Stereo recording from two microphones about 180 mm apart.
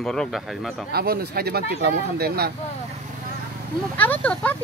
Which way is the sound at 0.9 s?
60° right (ahead or behind).